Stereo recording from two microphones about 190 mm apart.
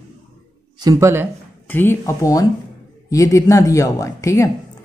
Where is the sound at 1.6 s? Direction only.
10° left (ahead or behind).